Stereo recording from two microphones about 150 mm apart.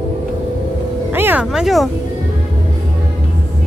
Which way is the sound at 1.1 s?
15° right (ahead or behind).